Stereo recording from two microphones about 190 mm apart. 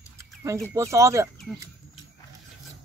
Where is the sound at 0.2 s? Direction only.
15° right (ahead or behind).